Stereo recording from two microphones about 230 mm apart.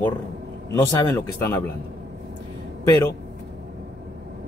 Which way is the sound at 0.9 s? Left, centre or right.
Centre.